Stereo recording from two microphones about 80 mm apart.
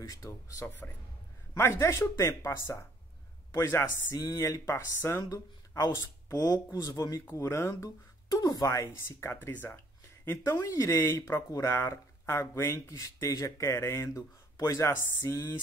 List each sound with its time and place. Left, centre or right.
0.0 s speech: left
7.2 s speech: left
10.4 s speech: left